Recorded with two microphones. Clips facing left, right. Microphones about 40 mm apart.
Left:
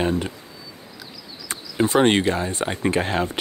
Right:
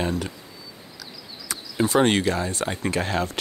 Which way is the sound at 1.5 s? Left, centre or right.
Left.